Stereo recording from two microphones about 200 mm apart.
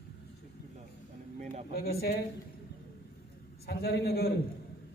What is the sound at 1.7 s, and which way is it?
Speech, 50° left (ahead or behind).